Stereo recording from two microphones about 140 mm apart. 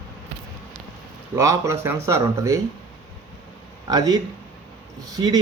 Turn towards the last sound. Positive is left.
turn(degrees=-30)  # may be behind; listen again after turning